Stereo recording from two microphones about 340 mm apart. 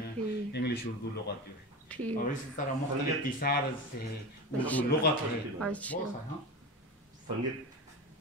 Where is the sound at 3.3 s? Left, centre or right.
Left.